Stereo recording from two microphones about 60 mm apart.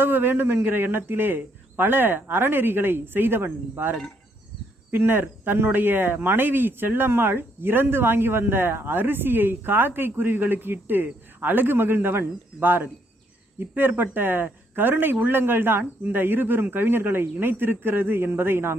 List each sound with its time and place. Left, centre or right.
0.0 s speech: right
4.9 s speech: right